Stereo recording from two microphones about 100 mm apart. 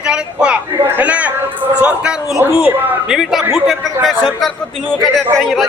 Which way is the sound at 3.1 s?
5° right (ahead or behind).